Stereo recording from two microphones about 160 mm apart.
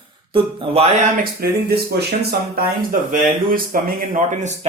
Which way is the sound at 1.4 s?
75° right (ahead or behind).